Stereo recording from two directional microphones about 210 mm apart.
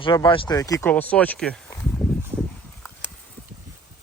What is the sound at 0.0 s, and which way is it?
Speech, 20° left (ahead or behind).